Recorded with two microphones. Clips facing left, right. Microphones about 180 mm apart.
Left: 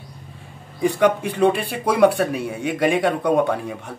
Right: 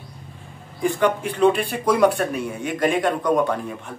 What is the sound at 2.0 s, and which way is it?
Speech, 60° left (ahead or behind).